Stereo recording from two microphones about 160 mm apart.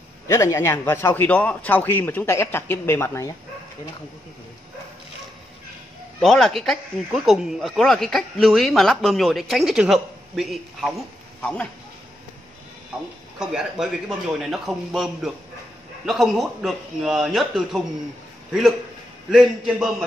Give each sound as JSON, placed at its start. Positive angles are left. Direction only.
{"t": 0.3, "sound": "a man's voice", "side_deg": 20}
{"t": 6.2, "sound": "speech", "side_deg": 0}
{"t": 13.4, "sound": "speech", "side_deg": -5}